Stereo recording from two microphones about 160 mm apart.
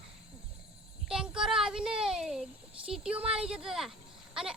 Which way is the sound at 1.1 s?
5° right (ahead or behind).